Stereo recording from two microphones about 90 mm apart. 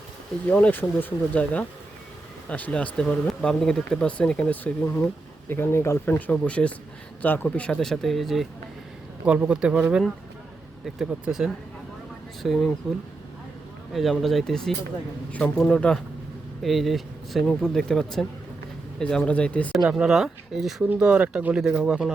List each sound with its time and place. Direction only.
0.4 s speech: 20° left (ahead or behind)
5.5 s speech: 25° left (ahead or behind); by 8.4 s centre (ahead or behind)
9.2 s speech: 15° right (ahead or behind)
10.8 s speech: 5° right (ahead or behind)
16.6 s speech: centre (ahead or behind)
19.7 s speech: 5° right (ahead or behind)
20.9 s speech: 10° right (ahead or behind)